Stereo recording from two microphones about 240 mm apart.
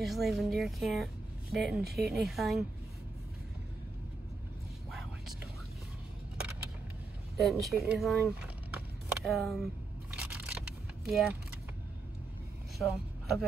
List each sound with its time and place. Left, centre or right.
0.0 s a woman's voice: centre
7.3 s a woman's voice: centre
10.1 s a sound: centre
11.1 s a woman's voice: centre
12.7 s speech: centre